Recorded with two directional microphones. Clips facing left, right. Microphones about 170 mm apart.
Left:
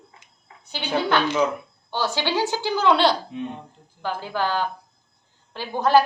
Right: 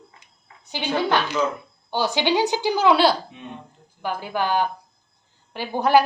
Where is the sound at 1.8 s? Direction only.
15° right (ahead or behind).